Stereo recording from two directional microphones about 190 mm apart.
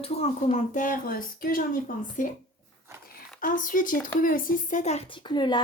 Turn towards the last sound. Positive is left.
turn(degrees=25)  # may be behind; listen again after turning